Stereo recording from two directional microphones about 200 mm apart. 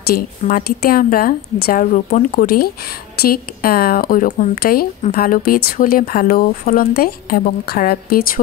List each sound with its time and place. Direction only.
0.0 s speech: 45° left (ahead or behind)